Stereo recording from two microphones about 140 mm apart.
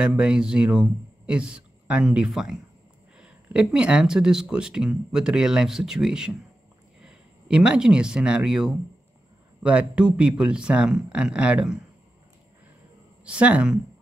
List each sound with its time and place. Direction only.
0.0 s speech: 5° right (ahead or behind)
13.2 s speech: 10° right (ahead or behind)